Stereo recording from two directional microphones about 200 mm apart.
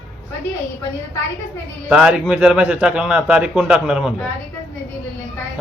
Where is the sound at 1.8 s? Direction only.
5° right (ahead or behind).